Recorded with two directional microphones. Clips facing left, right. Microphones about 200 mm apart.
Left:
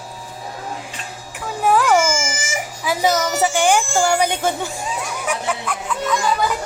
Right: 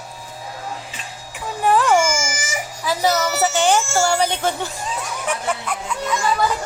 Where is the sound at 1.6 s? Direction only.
Centre (ahead or behind).